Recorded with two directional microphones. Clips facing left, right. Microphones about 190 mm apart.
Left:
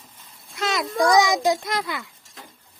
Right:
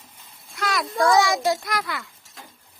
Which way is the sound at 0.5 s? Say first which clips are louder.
Left 1 dB; 20° left (ahead or behind).